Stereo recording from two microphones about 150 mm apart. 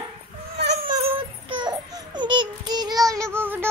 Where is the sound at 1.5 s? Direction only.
30° right (ahead or behind).